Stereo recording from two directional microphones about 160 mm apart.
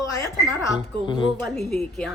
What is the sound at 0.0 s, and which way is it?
Speech, 20° left (ahead or behind).